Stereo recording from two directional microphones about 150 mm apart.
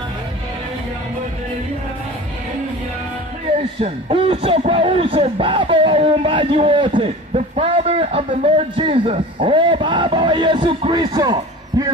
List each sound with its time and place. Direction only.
3.8 s a man's voice: 35° right (ahead or behind)